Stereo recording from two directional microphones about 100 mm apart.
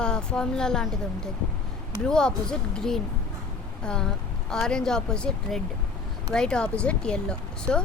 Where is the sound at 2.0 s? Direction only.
10° left (ahead or behind).